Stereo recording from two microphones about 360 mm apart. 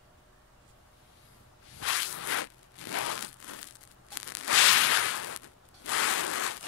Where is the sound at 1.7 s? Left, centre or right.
Left.